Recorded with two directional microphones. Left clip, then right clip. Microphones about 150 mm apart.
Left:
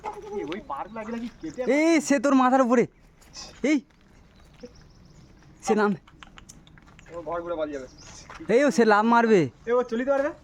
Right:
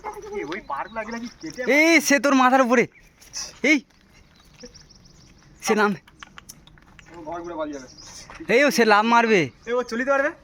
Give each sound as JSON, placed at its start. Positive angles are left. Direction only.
{"t": 0.3, "sound": "a sound", "side_deg": -5}
{"t": 1.5, "sound": "speech", "side_deg": 5}
{"t": 5.5, "sound": "speech", "side_deg": 5}
{"t": 6.1, "sound": "typing", "side_deg": -10}
{"t": 8.4, "sound": "speech", "side_deg": 20}
{"t": 9.6, "sound": "speech", "side_deg": -5}